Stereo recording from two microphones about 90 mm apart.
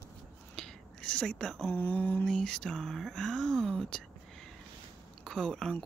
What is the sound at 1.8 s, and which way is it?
Mantra, 20° left (ahead or behind).